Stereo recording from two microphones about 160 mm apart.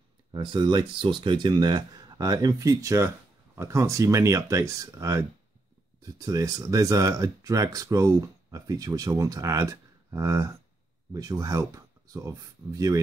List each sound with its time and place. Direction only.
0.3 s speech: 30° right (ahead or behind)